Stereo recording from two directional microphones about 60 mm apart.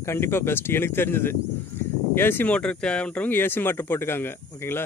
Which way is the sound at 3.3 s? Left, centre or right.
Left.